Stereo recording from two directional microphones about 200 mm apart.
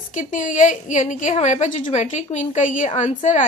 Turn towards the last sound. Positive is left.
turn(degrees=40)  # may be behind; listen again after turning